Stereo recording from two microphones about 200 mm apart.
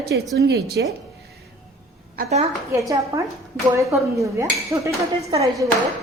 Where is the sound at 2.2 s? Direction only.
45° right (ahead or behind).